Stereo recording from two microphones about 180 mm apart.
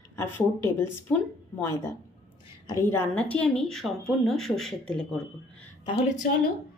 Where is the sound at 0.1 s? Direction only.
15° left (ahead or behind).